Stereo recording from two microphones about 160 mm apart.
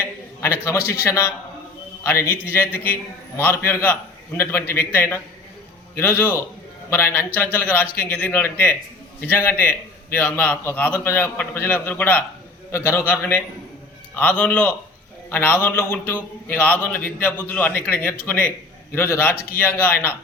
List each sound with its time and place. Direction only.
0.4 s a man's voice: 15° left (ahead or behind)